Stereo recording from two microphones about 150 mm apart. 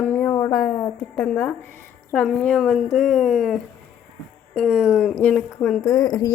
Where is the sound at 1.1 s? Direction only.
10° left (ahead or behind).